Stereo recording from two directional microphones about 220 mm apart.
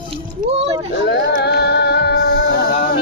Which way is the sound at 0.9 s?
50° left (ahead or behind).